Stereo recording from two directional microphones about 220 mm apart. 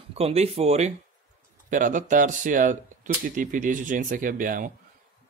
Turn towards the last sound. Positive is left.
turn(degrees=-40)  # may be behind; listen again after turning